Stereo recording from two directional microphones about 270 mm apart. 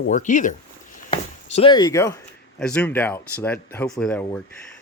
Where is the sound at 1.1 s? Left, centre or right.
Centre.